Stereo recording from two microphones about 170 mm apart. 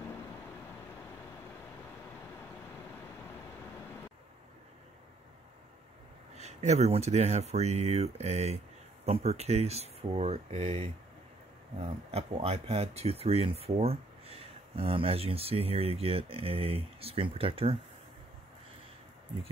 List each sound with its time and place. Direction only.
6.3 s speech: 40° right (ahead or behind)